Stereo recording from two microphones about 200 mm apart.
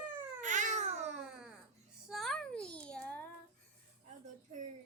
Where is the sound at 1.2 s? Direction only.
5° right (ahead or behind).